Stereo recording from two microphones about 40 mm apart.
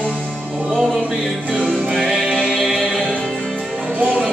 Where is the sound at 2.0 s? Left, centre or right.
Centre.